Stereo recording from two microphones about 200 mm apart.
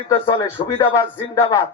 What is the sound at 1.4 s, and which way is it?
Music, 15° left (ahead or behind).